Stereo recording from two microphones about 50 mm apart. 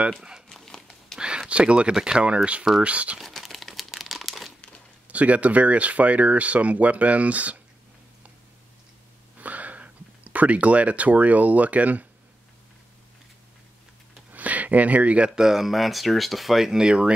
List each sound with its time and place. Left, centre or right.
0.5 s a sound: centre
1.5 s speech: right
3.2 s crumpling: centre
5.0 s speech: right
9.4 s speech: right
14.3 s speech: right
15.4 s speech: centre